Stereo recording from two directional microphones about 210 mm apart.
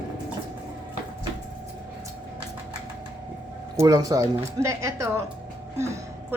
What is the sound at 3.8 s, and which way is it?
A woman's voice, 15° right (ahead or behind).